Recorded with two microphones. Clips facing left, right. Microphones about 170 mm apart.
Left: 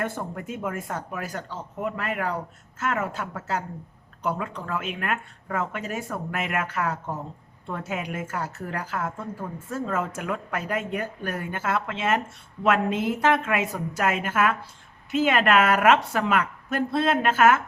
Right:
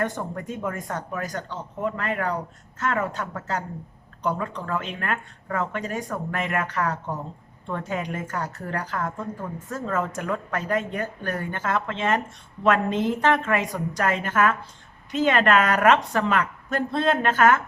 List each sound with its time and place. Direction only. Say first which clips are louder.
0.0 s a woman's voice: right 2 dB; 5° left (ahead or behind)